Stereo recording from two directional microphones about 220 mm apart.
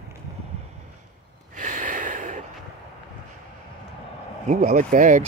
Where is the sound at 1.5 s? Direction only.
35° right (ahead or behind).